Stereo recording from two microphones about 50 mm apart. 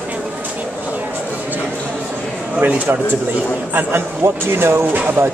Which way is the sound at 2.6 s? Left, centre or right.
Right.